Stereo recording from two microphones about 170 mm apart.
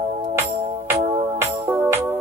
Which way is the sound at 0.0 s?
35° right (ahead or behind).